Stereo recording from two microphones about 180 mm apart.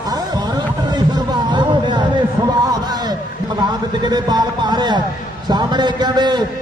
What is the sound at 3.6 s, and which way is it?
Speech, 20° right (ahead or behind).